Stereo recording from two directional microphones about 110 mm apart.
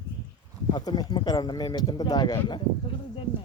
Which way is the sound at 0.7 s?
40° left (ahead or behind).